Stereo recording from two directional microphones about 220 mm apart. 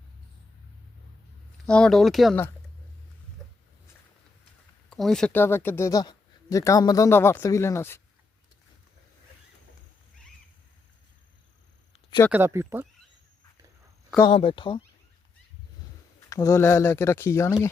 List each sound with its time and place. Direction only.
1.6 s speech: 5° left (ahead or behind)
4.9 s speech: centre (ahead or behind)
12.3 s speech: 10° right (ahead or behind)
14.3 s speech: 25° left (ahead or behind)
16.3 s speech: 15° left (ahead or behind)